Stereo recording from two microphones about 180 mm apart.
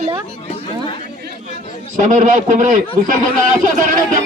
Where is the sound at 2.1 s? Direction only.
45° right (ahead or behind).